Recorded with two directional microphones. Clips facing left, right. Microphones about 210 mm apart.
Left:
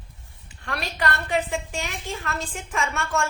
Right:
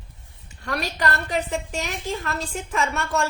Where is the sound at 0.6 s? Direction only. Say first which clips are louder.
Right 2 dB; 40° right (ahead or behind).